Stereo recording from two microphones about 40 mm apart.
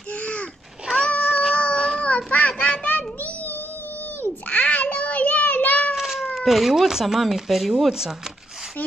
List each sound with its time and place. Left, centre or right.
0.1 s a sound: left
1.1 s cat: left
1.5 s baby cry: left
2.0 s child singing: left
2.3 s a sound: left
2.9 s child singing: left
4.5 s a sound: left
5.9 s cat: centre
6.4 s speech: centre